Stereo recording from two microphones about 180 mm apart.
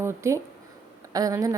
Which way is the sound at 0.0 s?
15° right (ahead or behind).